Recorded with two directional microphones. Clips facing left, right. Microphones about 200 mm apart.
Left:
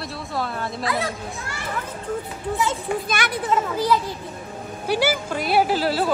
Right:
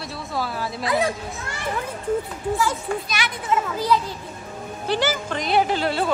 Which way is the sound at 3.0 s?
50° left (ahead or behind).